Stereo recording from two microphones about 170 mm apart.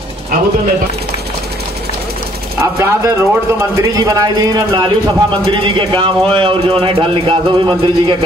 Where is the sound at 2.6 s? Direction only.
15° right (ahead or behind).